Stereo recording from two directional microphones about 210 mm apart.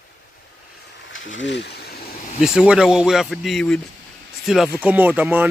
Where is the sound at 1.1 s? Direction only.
65° left (ahead or behind).